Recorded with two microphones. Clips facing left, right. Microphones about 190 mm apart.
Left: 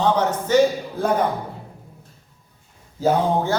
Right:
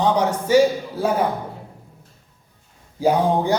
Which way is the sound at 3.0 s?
15° right (ahead or behind).